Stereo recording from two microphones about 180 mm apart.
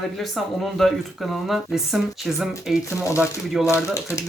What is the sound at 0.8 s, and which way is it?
Speech, centre (ahead or behind).